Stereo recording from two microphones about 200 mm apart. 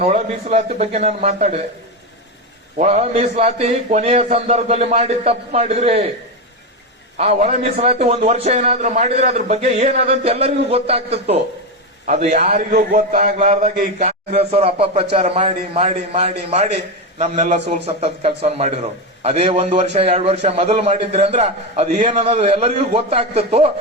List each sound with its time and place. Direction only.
0.0 s a man's voice: 35° right (ahead or behind)
2.7 s a man's voice: 35° right (ahead or behind)
7.2 s a man's voice: 30° right (ahead or behind)